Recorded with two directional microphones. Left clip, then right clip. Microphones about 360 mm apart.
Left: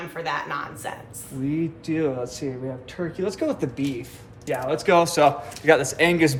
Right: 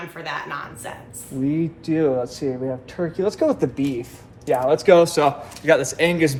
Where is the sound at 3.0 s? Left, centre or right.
Centre.